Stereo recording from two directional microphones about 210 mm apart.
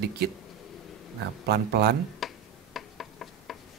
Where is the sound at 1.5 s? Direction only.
50° right (ahead or behind).